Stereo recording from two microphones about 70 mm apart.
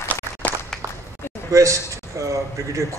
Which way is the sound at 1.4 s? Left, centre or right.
Right.